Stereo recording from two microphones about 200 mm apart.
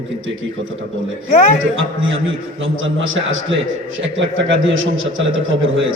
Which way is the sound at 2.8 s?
75° right (ahead or behind).